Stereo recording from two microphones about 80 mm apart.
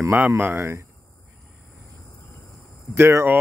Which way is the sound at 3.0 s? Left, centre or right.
Right.